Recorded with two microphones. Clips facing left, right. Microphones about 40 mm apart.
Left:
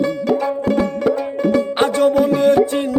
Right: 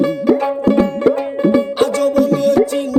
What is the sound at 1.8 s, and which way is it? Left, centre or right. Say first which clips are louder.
Music: even; left.